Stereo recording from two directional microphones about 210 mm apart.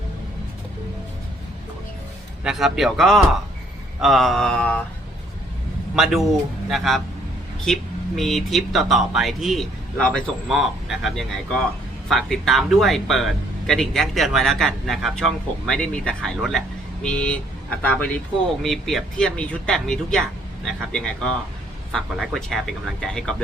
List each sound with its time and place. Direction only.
2.4 s speech: 5° right (ahead or behind)
6.0 s speech: centre (ahead or behind)